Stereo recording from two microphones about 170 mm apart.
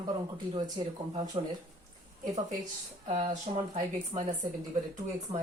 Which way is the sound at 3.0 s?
40° right (ahead or behind).